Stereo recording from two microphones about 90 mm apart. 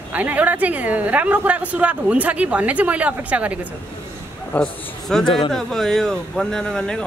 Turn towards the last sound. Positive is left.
turn(degrees=10)  # may be behind; listen again after turning